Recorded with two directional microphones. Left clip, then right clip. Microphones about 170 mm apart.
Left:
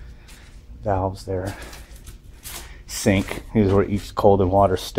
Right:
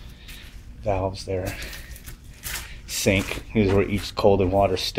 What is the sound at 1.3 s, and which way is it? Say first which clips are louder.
Speech: left 1 dB; centre (ahead or behind).